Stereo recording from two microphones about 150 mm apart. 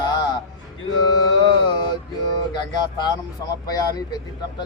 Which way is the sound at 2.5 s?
25° left (ahead or behind).